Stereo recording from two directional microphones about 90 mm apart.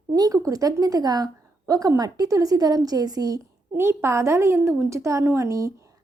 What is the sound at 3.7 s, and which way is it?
A woman's voice, 30° right (ahead or behind).